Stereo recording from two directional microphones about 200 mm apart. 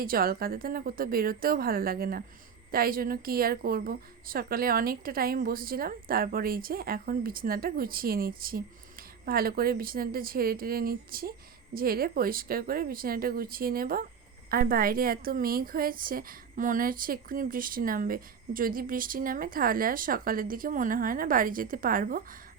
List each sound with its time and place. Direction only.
0.0 s a woman's voice: 45° right (ahead or behind)